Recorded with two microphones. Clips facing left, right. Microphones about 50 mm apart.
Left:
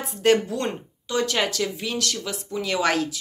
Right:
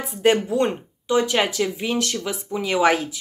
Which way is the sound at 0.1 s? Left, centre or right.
Centre.